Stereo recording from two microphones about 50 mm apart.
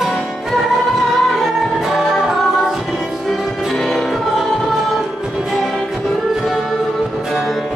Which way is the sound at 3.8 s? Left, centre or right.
Centre.